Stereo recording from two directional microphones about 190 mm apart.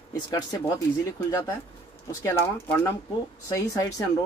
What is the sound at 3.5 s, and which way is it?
Speech, 20° left (ahead or behind).